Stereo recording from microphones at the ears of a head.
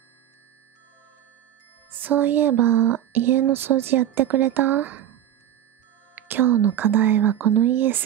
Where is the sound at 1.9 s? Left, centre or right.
Right.